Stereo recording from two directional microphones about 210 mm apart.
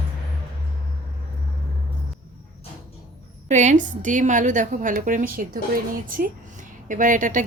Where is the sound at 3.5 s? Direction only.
35° right (ahead or behind).